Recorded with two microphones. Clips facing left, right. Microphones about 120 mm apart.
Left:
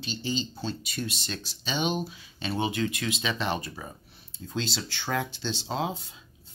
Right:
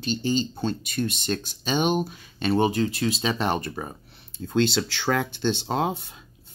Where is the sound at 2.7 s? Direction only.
35° right (ahead or behind).